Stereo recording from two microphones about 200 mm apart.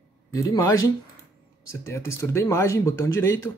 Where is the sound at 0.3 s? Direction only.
15° left (ahead or behind).